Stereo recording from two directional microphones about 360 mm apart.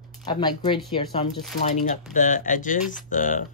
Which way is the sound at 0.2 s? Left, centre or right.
Centre.